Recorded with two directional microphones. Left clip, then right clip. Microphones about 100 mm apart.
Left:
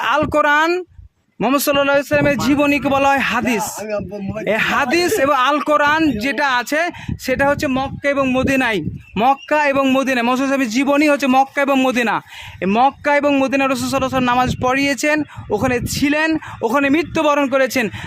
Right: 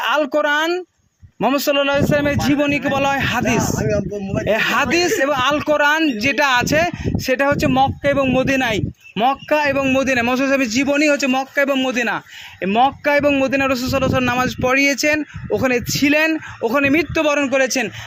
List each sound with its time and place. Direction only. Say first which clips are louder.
0.0 s speech: left 1 dB; 40° left (ahead or behind)
0.3 s speech: left 3 dB; 65° left (ahead or behind)
1.4 s a man's voice: left 1 dB; 45° left (ahead or behind)
3.8 s speech: right 3 dB; 20° left (ahead or behind)
4.4 s speech: left 1 dB; 35° left (ahead or behind)
6.3 s speech: right 4 dB; 20° left (ahead or behind)
8.0 s speech: even; 40° left (ahead or behind)
9.1 s a man's voice: left 2 dB; 50° left (ahead or behind)
12.0 s speech: left 3 dB; 35° left (ahead or behind)
16.3 s speech: left 1 dB; 40° left (ahead or behind)